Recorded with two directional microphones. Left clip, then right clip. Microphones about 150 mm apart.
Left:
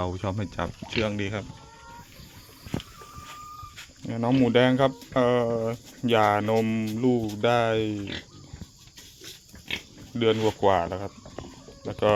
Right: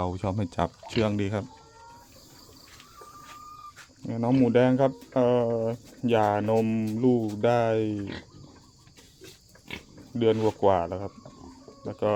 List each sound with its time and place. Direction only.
0.0 s speech: 20° right (ahead or behind)
0.5 s speech: 45° right (ahead or behind)
4.1 s speech: 5° right (ahead or behind)
9.6 s pig: centre (ahead or behind)
10.6 s speech: 5° right (ahead or behind)